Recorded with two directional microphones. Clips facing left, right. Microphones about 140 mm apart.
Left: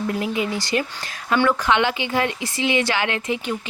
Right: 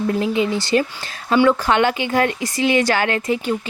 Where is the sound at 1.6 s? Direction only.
45° right (ahead or behind).